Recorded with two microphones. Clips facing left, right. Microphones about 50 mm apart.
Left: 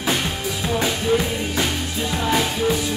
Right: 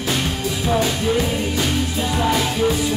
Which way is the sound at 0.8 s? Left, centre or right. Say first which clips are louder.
Even; centre.